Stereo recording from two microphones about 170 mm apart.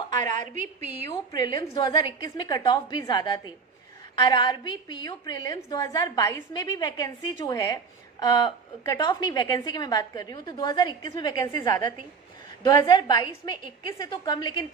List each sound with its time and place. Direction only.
0.1 s a woman's voice: 45° right (ahead or behind)
1.1 s a woman's voice: 25° left (ahead or behind)